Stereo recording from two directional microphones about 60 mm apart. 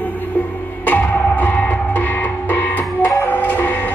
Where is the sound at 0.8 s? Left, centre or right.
Left.